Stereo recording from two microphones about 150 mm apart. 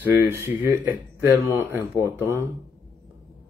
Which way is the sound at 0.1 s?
15° right (ahead or behind).